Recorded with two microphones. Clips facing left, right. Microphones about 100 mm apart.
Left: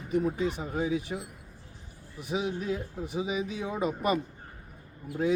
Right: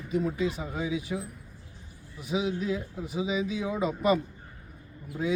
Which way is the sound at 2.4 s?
45° left (ahead or behind).